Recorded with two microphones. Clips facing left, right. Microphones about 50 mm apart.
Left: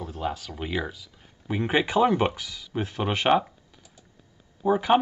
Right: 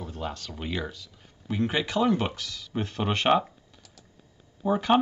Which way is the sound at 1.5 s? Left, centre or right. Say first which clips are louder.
Left 3 dB; left.